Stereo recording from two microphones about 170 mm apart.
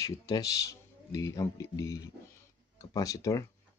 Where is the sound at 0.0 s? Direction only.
20° left (ahead or behind).